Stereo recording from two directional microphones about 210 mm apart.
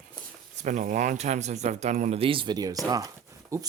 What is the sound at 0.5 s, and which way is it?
Speech, 35° right (ahead or behind).